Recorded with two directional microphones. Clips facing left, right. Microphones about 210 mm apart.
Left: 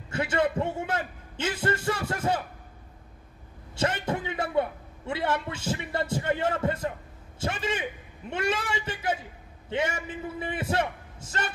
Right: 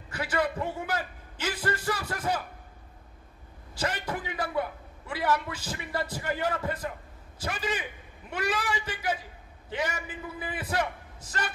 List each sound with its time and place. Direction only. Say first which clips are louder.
0.1 s a man's voice: left 3 dB; 25° left (ahead or behind)
3.7 s a man's voice: left 4 dB; 25° left (ahead or behind)